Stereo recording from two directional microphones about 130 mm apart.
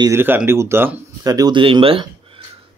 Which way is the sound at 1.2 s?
30° right (ahead or behind).